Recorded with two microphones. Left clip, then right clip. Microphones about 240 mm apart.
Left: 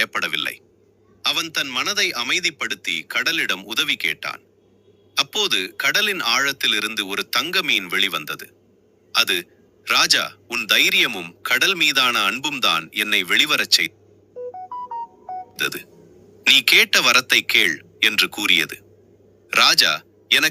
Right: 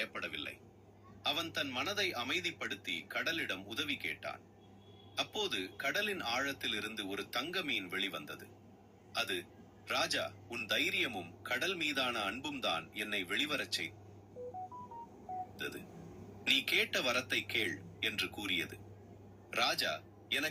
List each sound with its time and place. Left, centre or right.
0.0 s a sound: left
1.2 s a man's voice: left
15.5 s a man's voice: left